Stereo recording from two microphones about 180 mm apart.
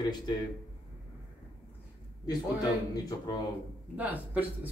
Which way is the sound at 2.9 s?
20° left (ahead or behind).